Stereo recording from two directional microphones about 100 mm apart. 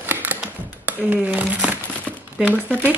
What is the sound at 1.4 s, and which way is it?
Crumpling, 15° right (ahead or behind).